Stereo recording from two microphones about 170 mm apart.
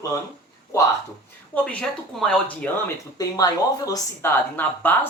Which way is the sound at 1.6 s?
5° left (ahead or behind).